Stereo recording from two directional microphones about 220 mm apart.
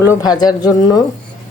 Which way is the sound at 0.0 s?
15° left (ahead or behind).